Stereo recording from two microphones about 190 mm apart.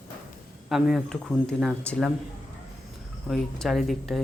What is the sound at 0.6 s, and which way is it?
Speech, centre (ahead or behind).